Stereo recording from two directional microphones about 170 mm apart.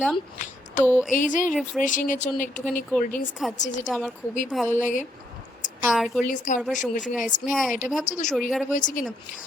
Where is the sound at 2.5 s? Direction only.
5° left (ahead or behind).